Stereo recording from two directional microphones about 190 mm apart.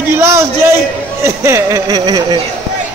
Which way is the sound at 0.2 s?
15° right (ahead or behind).